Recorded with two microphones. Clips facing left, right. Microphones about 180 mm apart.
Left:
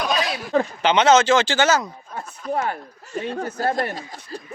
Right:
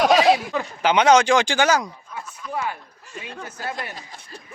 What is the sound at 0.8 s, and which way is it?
Speech, 10° right (ahead or behind).